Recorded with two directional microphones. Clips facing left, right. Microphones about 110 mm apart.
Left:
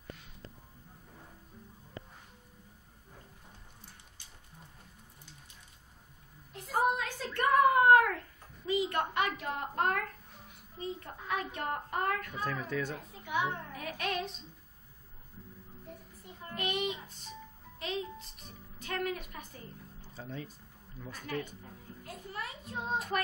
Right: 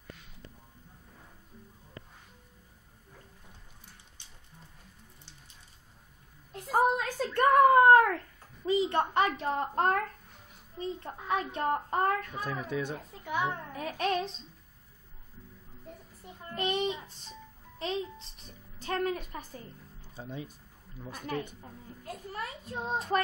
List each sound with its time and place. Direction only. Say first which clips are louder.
6.5 s a sound: right 4 dB; 40° right (ahead or behind)
8.6 s a woman's voice: right 4 dB; 30° right (ahead or behind)
12.4 s speech: right 1 dB; 15° right (ahead or behind)
13.2 s a child's voice: right 1 dB; 35° right (ahead or behind)
16.5 s a child's voice: right 4 dB; 30° right (ahead or behind)
20.2 s speech: right 2 dB; 15° right (ahead or behind)
21.5 s a child's voice: right 2 dB; 35° right (ahead or behind)